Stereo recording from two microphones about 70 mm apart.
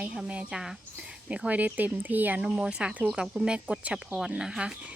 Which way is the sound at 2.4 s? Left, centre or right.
Centre.